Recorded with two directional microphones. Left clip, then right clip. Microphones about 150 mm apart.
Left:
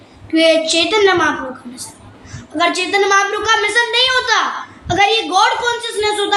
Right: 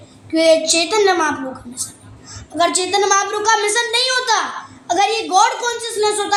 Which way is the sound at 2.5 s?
50° right (ahead or behind).